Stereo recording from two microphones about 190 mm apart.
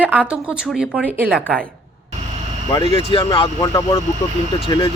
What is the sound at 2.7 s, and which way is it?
Speech, 25° left (ahead or behind).